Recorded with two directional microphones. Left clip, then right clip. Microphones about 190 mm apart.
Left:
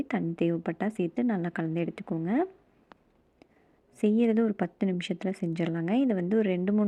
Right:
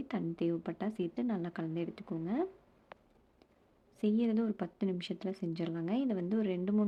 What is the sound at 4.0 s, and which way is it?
Speech, 25° left (ahead or behind).